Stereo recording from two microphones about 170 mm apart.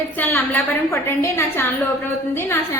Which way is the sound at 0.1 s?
10° left (ahead or behind).